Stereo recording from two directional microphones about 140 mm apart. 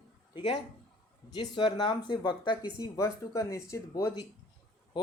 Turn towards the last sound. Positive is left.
turn(degrees=25)  # may be behind; listen again after turning